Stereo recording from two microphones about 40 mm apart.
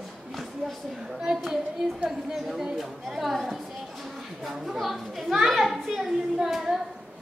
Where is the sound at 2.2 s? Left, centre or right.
Centre.